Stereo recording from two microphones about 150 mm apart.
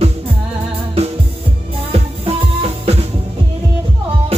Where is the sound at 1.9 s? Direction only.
40° right (ahead or behind).